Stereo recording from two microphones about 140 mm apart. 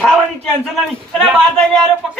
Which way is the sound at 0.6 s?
5° left (ahead or behind).